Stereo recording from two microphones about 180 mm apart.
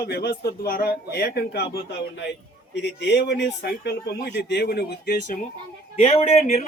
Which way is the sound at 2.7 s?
70° left (ahead or behind).